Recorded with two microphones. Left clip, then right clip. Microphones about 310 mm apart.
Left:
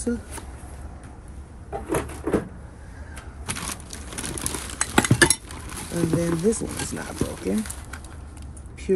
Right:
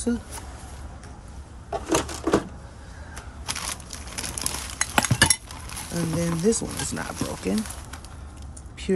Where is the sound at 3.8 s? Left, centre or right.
Right.